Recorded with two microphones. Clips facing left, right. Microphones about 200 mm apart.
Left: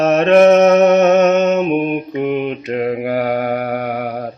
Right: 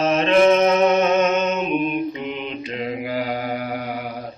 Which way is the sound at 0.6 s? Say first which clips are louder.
Left 7 dB; 70° left (ahead or behind).